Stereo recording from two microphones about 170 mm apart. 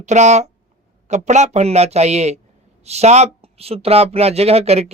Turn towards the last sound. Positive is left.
turn(degrees=-35)  # may be behind; listen again after turning